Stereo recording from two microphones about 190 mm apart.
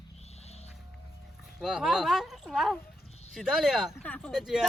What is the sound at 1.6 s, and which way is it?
Speech, centre (ahead or behind).